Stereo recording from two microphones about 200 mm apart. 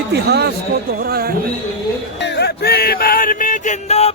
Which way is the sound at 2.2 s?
60° left (ahead or behind).